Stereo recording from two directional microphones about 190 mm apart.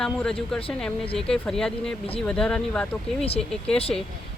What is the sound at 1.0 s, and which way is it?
Speech, 30° left (ahead or behind).